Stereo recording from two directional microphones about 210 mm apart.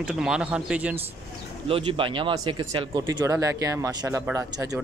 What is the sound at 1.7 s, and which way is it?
Speech, 25° right (ahead or behind).